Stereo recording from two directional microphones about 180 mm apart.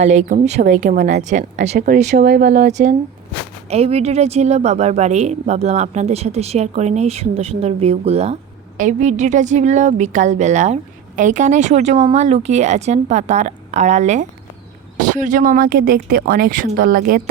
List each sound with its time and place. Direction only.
0.0 s a woman's voice: 40° right (ahead or behind)
2.2 s a woman's voice: 65° right (ahead or behind)